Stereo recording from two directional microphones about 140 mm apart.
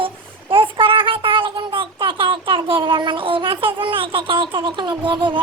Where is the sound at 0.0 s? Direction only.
40° right (ahead or behind).